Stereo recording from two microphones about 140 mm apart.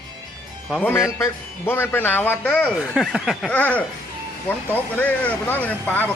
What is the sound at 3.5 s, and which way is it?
Speech, 10° left (ahead or behind).